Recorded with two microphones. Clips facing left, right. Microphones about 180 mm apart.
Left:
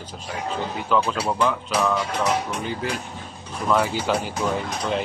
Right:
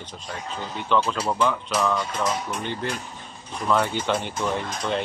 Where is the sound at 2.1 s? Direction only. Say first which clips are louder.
Left 3 dB; 70° left (ahead or behind).